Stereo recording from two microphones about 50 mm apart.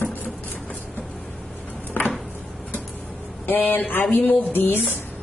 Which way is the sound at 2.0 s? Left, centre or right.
Left.